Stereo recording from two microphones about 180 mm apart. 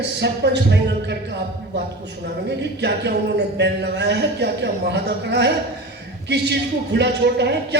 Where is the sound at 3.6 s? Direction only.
70° right (ahead or behind).